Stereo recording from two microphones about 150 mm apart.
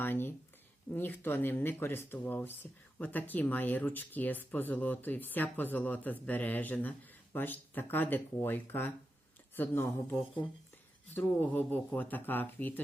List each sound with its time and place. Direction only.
0.0 s speech: 15° left (ahead or behind)